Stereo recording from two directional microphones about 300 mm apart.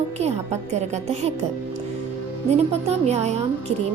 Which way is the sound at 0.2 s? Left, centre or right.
Right.